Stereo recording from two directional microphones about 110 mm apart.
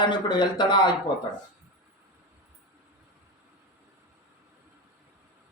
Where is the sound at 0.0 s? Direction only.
45° left (ahead or behind).